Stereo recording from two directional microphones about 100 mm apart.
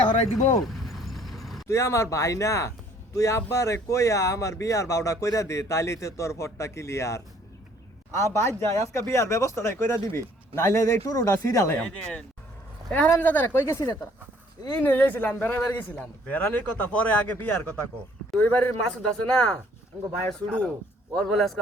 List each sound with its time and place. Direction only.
0.6 s vehicle: centre (ahead or behind)
1.6 s speech: 30° left (ahead or behind)
11.8 s a man's voice: 10° left (ahead or behind)